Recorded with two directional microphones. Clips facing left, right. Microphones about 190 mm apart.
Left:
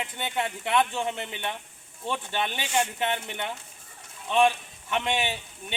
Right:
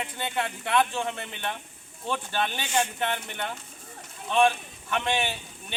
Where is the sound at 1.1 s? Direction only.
20° left (ahead or behind).